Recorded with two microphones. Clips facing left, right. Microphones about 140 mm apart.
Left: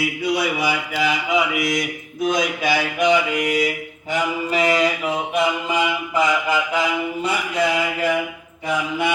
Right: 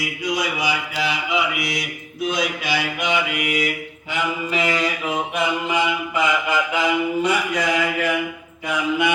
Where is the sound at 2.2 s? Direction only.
45° left (ahead or behind).